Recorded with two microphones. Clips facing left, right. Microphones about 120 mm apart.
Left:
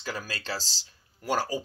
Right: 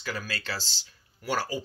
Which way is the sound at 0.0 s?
35° left (ahead or behind).